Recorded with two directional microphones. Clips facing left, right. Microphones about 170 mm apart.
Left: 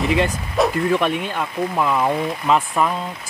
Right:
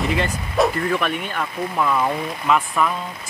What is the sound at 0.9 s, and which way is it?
Speech, 20° left (ahead or behind).